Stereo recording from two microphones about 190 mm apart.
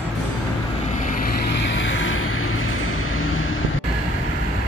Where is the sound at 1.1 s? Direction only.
45° left (ahead or behind).